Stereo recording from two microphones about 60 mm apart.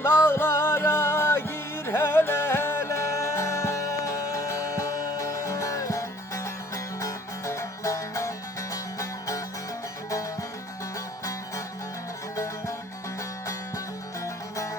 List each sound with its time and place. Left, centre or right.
0.2 s music: left